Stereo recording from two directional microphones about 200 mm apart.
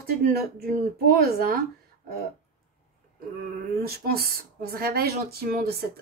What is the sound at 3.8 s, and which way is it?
Speech, 50° right (ahead or behind).